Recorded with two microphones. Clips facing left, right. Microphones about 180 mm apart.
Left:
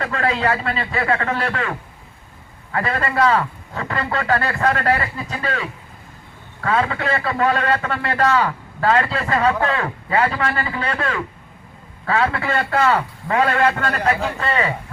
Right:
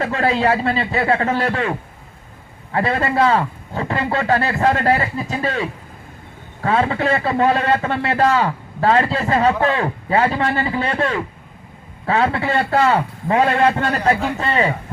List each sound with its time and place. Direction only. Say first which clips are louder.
0.0 s a man's voice: right 3 dB; 25° right (ahead or behind)
2.7 s a man's voice: right 3 dB; 30° right (ahead or behind)